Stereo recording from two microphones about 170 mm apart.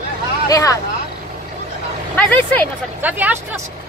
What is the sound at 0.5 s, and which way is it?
Speech, 20° left (ahead or behind).